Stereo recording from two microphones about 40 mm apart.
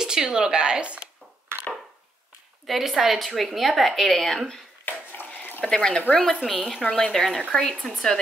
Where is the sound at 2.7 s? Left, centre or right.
Centre.